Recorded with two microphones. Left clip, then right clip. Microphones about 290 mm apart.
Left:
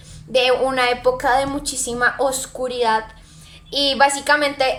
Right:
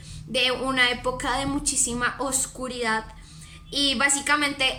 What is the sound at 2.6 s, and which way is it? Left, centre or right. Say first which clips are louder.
A woman's voice: left 9 dB; centre.